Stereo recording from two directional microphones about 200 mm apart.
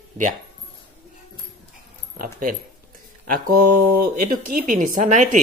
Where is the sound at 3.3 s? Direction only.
45° right (ahead or behind).